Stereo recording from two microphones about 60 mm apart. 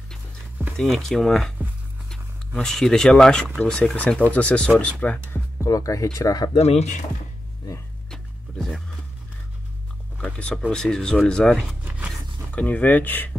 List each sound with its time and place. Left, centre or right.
0.7 s speech: centre; by 5.2 s left
5.7 s speech: left
8.1 s music: centre
10.1 s a sound: left
10.7 s speech: centre
12.5 s speech: left